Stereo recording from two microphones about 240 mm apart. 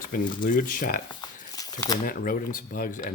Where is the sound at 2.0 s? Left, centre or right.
Left.